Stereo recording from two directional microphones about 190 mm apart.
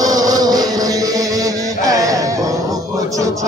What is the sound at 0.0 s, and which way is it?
Music, 20° right (ahead or behind).